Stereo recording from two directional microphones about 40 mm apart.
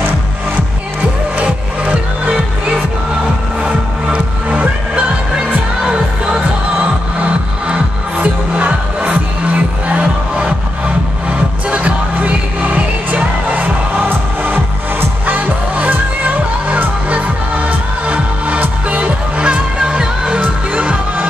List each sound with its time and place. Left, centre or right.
1.4 s music: right
7.6 s music: right
11.7 s music: right
20.3 s music: right